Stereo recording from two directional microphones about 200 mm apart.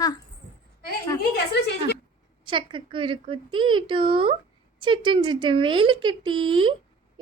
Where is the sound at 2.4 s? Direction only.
25° right (ahead or behind).